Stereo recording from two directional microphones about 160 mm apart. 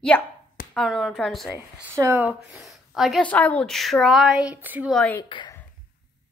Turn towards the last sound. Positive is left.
turn(degrees=30)  # may be behind; listen again after turning